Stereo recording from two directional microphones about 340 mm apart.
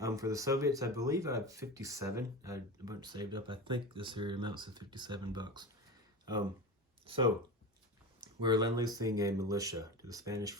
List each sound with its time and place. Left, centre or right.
0.0 s speech: centre
7.0 s speech: centre